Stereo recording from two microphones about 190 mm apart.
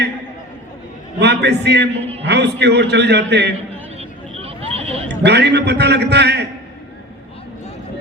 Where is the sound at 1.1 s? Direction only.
60° right (ahead or behind).